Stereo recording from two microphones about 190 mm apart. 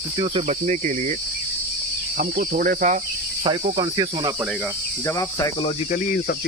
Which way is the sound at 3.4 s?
25° right (ahead or behind).